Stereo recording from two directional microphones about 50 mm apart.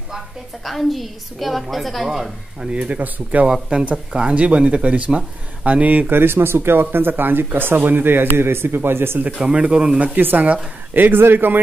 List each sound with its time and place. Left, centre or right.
0.7 s a woman's voice: centre
2.7 s a woman's voice: right
6.1 s speech: right
9.2 s a woman's voice: right